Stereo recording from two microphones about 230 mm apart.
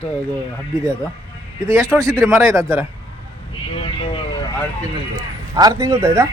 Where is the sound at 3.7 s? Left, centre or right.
Left.